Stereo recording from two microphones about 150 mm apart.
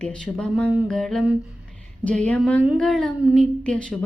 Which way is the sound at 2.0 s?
10° left (ahead or behind).